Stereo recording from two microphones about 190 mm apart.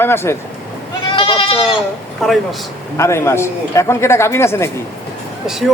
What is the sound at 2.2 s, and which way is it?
Speech, centre (ahead or behind).